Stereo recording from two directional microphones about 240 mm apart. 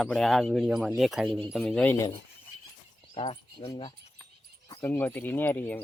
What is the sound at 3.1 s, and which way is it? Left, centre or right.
Speech, left.